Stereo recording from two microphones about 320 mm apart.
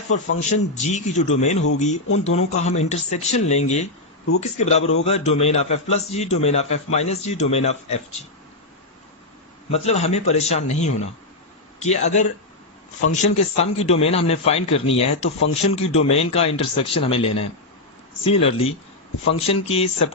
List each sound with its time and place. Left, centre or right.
0.1 s a man's voice: left
2.0 s speech: left
2.3 s a man's voice: left
9.7 s a man's voice: centre